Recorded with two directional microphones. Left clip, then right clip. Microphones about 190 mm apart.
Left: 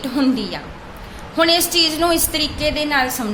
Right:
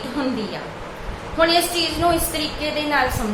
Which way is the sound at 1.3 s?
55° left (ahead or behind).